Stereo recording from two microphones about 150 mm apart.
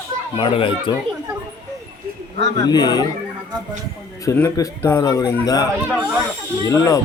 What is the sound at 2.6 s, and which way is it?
Speech, 25° left (ahead or behind).